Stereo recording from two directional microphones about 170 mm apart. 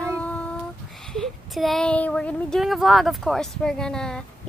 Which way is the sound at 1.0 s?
5° left (ahead or behind).